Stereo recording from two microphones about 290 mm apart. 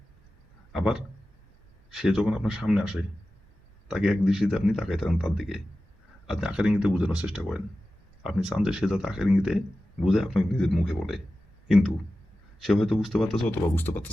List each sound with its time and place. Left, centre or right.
0.7 s a man's voice: centre